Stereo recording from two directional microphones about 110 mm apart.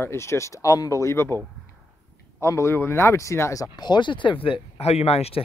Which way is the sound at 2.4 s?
25° left (ahead or behind).